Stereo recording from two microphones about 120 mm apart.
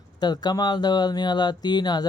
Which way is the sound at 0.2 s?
35° left (ahead or behind).